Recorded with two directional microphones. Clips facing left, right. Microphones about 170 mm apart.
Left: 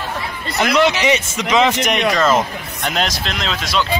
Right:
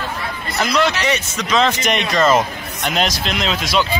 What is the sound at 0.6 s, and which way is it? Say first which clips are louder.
Speech: left 3 dB; 20° left (ahead or behind).